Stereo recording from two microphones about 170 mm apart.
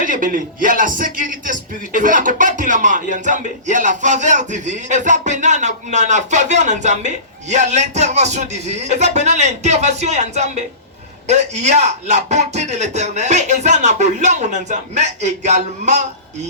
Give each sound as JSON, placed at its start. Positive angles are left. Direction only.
{"t": 0.0, "sound": "speech", "side_deg": -50}